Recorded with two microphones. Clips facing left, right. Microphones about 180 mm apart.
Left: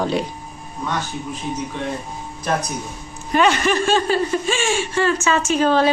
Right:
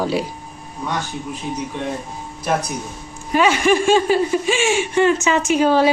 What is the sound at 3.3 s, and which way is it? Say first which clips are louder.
Speech: right 2 dB; 10° right (ahead or behind).